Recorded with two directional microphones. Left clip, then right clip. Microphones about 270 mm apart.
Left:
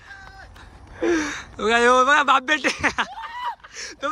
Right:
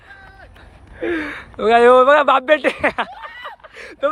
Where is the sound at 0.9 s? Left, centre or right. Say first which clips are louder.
Even; centre.